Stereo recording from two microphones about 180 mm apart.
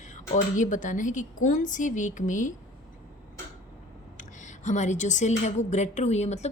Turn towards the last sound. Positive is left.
turn(degrees=40)  # may be behind; listen again after turning